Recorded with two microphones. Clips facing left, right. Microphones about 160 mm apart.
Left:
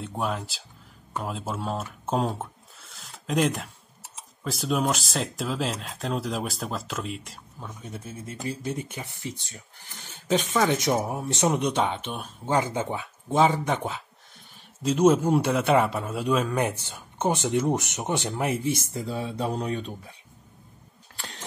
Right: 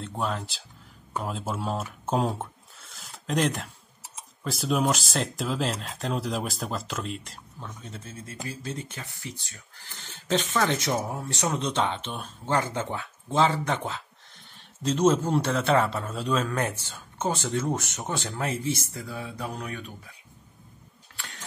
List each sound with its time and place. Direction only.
0.0 s speech: 5° left (ahead or behind); by 20.2 s 30° left (ahead or behind)